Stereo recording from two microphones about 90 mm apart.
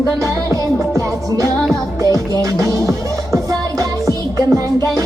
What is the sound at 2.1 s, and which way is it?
Music, 40° right (ahead or behind).